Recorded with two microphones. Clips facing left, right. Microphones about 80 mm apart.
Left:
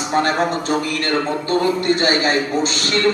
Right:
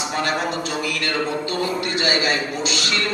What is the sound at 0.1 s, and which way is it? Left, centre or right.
A man's voice, left.